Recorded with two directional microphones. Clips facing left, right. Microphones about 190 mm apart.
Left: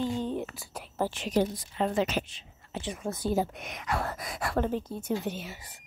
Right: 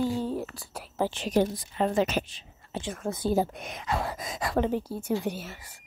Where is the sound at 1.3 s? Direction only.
45° right (ahead or behind); by 4.0 s 25° right (ahead or behind).